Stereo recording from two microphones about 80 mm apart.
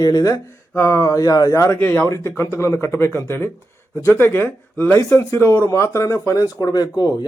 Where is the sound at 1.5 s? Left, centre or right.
Left.